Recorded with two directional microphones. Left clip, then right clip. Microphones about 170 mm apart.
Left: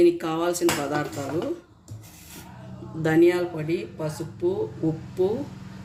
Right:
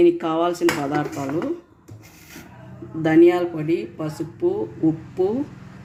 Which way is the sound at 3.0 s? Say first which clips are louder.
Right 5 dB; 55° right (ahead or behind).